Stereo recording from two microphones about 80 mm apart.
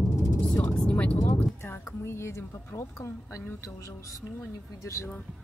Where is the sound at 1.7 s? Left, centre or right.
Left.